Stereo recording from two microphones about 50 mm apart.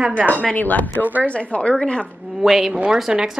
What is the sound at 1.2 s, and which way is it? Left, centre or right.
Speech, left.